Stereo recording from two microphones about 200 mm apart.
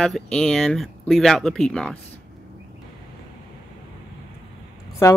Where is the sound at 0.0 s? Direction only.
5° left (ahead or behind).